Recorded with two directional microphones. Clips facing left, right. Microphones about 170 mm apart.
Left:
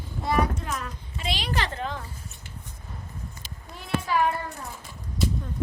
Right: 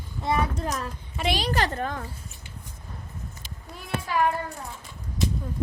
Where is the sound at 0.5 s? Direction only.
35° right (ahead or behind).